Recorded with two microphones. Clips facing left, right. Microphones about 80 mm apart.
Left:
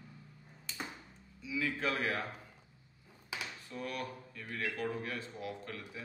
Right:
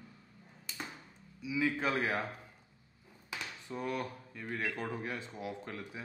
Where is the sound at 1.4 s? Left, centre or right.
Centre.